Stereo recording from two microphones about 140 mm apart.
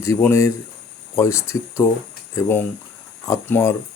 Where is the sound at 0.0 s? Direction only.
20° left (ahead or behind).